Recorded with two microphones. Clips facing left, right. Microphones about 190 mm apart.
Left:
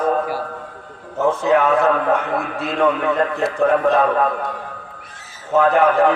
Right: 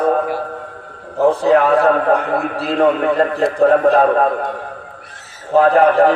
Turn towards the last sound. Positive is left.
turn(degrees=-35)  # may be behind; listen again after turning